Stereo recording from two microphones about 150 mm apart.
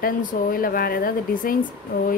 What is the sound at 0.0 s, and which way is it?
Speech, 70° left (ahead or behind).